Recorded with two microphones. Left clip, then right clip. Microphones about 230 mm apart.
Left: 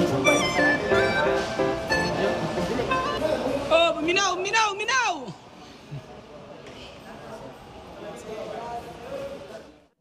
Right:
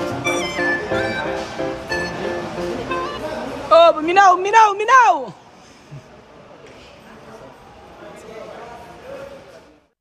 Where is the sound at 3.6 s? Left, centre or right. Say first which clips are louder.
Right 11 dB; centre.